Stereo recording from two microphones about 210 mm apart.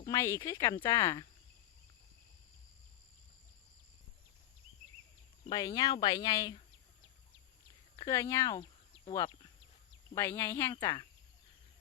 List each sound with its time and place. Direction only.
0.0 s speech: 15° left (ahead or behind)
5.5 s speech: 20° left (ahead or behind)
7.9 s speech: 15° left (ahead or behind)